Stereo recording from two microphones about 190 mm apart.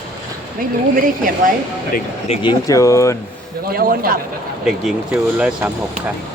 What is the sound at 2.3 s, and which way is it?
Speech, 25° left (ahead or behind).